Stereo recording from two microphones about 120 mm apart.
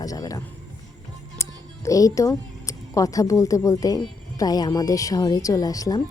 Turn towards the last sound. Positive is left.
turn(degrees=30)  # may be behind; listen again after turning